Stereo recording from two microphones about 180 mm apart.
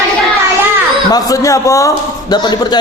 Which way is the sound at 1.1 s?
20° left (ahead or behind).